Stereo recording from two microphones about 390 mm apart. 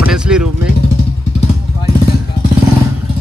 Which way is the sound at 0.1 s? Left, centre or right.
Centre.